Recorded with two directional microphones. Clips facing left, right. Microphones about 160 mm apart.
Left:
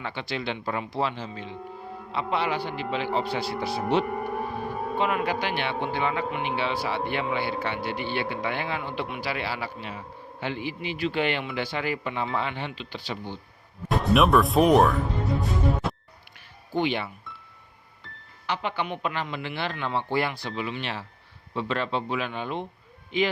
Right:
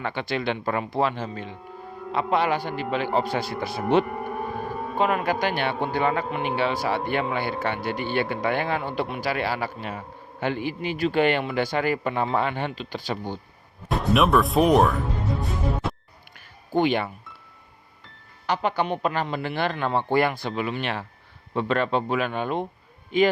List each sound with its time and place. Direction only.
0.0 s speech: 55° right (ahead or behind)
13.9 s speech: centre (ahead or behind)
15.8 s music: centre (ahead or behind)
16.7 s speech: 50° right (ahead or behind)
18.4 s speech: 45° right (ahead or behind)